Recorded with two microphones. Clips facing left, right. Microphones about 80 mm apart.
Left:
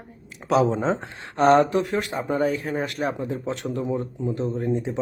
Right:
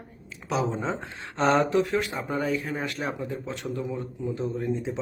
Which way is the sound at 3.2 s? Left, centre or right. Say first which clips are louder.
Left 4 dB; left.